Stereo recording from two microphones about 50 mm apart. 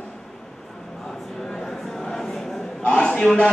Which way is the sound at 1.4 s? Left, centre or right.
Centre.